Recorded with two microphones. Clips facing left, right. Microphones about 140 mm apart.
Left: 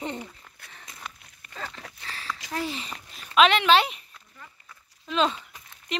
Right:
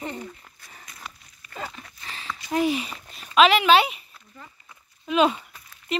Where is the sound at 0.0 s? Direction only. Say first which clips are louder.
Even; 20° left (ahead or behind).